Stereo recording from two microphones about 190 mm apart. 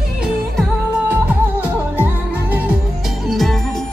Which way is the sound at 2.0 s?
10° right (ahead or behind).